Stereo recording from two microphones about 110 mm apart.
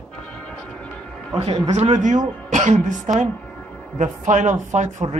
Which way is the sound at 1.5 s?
90° right.